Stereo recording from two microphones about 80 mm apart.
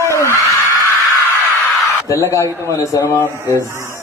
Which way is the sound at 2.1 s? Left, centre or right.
Left.